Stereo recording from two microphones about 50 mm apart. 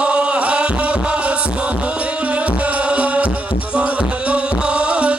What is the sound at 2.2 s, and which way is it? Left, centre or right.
Music, right.